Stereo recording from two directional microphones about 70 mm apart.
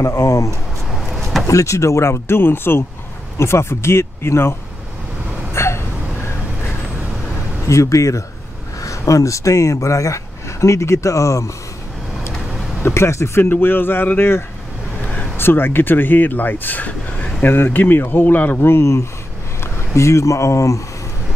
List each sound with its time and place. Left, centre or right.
0.0 s speech: left
0.9 s a sound: centre
1.5 s speech: left
5.5 s gasp: left
7.6 s speech: left
12.8 s speech: left